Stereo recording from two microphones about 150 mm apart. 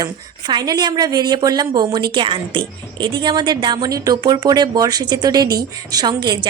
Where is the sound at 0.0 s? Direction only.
25° right (ahead or behind).